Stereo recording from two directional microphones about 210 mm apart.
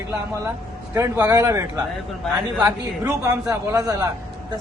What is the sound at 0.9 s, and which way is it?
A man's voice, 10° right (ahead or behind).